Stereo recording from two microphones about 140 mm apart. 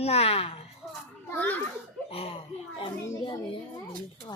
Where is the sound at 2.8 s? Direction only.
35° left (ahead or behind).